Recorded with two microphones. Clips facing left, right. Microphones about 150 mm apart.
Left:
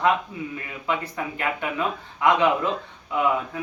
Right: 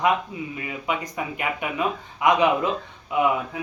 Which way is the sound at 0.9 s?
15° right (ahead or behind).